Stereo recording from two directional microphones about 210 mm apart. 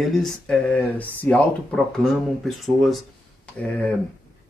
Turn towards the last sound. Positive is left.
turn(degrees=5)  # may be behind; listen again after turning